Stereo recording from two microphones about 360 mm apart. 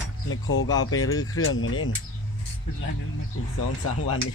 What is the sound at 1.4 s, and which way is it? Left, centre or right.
Speech, left.